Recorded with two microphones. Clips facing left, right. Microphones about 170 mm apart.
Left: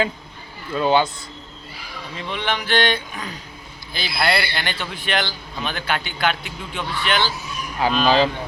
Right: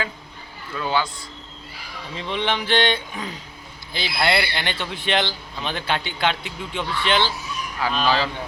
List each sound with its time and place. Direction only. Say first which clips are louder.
0.7 s a man's voice: left 6 dB; 25° left (ahead or behind)
2.1 s speech: right 1 dB; 25° right (ahead or behind)
8.0 s a man's voice: left 5 dB; 20° left (ahead or behind)